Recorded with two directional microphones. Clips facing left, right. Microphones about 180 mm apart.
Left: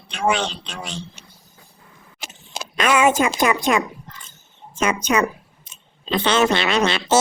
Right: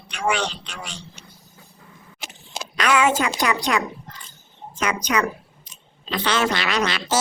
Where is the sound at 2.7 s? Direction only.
20° left (ahead or behind).